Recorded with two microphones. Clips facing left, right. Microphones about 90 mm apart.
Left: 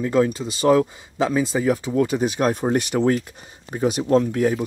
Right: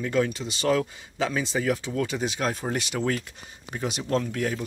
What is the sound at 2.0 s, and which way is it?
Speech, 45° left (ahead or behind).